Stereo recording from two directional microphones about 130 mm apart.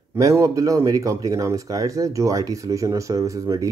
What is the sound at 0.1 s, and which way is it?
Speech, 25° right (ahead or behind).